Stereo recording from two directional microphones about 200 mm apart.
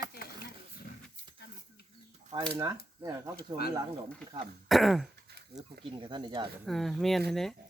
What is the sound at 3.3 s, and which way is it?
Speech, 50° left (ahead or behind).